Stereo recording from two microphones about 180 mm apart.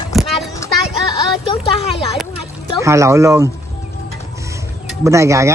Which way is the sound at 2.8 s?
15° right (ahead or behind).